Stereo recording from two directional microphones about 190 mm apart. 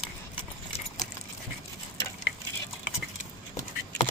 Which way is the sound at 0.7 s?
40° left (ahead or behind).